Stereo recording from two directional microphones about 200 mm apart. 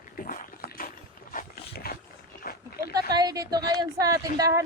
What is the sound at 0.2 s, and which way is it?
Dog, 45° left (ahead or behind).